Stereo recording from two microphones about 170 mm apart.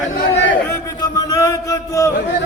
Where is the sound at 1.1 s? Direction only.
20° left (ahead or behind).